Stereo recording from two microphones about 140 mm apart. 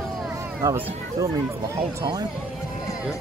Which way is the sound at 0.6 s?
20° right (ahead or behind).